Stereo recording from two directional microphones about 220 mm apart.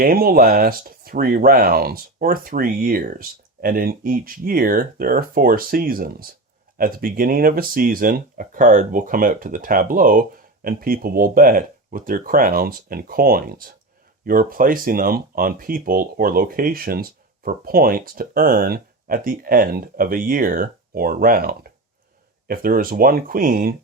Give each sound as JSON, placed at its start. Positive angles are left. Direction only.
{"t": 0.0, "sound": "speech", "side_deg": -40}